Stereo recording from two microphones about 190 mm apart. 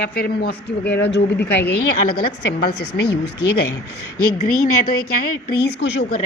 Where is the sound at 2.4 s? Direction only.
60° left (ahead or behind).